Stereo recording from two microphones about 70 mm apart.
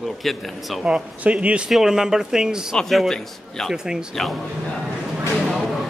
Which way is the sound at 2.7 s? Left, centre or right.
Centre.